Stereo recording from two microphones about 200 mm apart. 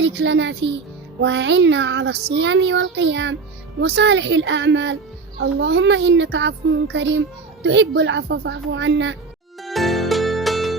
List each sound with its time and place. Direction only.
0.0 s a child's voice: 60° right (ahead or behind)
9.6 s music: centre (ahead or behind)